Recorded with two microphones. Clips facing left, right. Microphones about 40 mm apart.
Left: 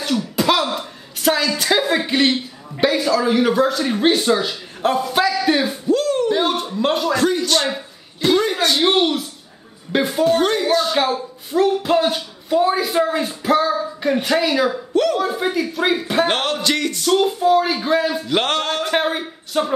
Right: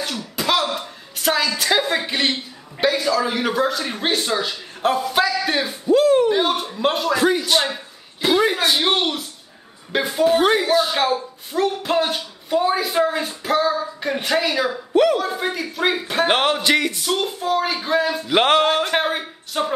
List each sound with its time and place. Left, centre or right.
0.0 s speech: centre
5.9 s a sound: centre
6.3 s a man's voice: centre
10.3 s speech: centre
16.3 s speech: centre
18.3 s speech: centre